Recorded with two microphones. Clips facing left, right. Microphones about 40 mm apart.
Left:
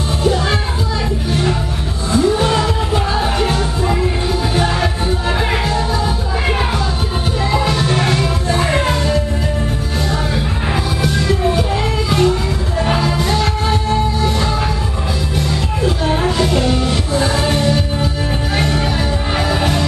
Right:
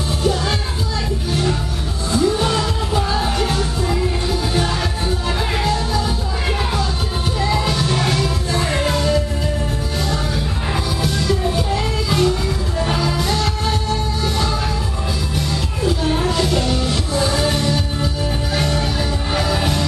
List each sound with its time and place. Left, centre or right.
0.2 s music: centre
7.5 s music: centre
11.0 s music: centre
15.8 s music: centre